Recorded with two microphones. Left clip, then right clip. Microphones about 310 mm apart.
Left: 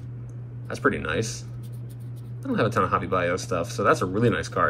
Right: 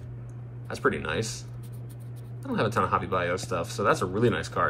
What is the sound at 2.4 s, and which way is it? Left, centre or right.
Speech, centre.